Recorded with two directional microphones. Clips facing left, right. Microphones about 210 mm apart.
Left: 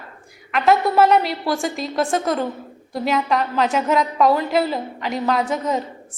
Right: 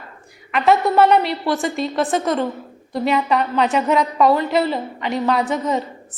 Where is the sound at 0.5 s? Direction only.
Centre (ahead or behind).